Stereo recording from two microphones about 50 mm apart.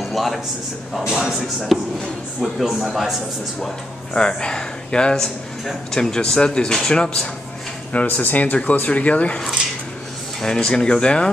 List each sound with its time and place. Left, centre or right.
0.0 s a man's voice: centre
1.0 s a man's voice: centre
4.1 s speech: centre
7.9 s speech: left
10.4 s speech: centre